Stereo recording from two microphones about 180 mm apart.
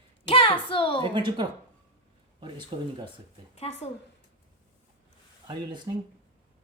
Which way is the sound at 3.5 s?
35° left (ahead or behind).